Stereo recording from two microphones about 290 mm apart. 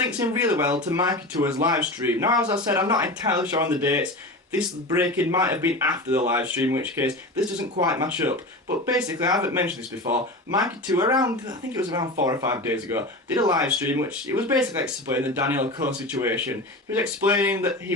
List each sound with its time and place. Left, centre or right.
0.0 s speech: centre
10.8 s speech: centre